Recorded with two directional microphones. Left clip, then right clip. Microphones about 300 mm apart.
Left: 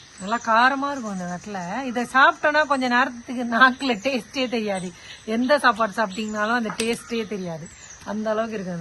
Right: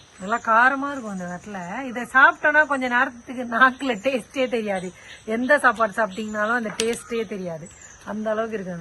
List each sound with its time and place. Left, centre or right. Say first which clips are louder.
0.3 s speech: right 1 dB; centre